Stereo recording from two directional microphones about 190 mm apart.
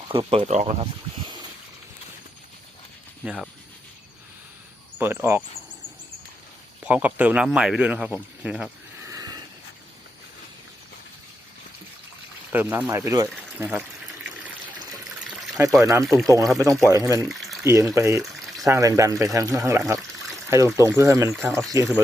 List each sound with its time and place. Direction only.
0.1 s speech: 25° right (ahead or behind)
3.2 s speech: centre (ahead or behind)
4.9 s speech: 10° right (ahead or behind)
6.8 s speech: 10° right (ahead or behind)
9.0 s a sound: 20° right (ahead or behind)
12.5 s speech: 10° right (ahead or behind)
15.3 s water: 5° right (ahead or behind)
15.8 s speech: 15° right (ahead or behind)
17.2 s water: centre (ahead or behind)
17.6 s speech: 15° right (ahead or behind)